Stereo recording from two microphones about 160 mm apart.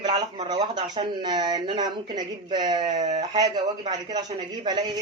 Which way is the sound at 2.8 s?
50° right (ahead or behind).